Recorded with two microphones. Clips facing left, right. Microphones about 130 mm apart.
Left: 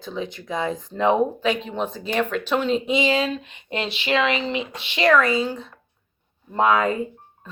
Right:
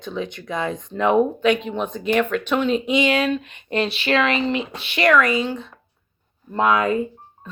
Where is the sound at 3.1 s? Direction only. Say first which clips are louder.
Right 2 dB; 65° right (ahead or behind).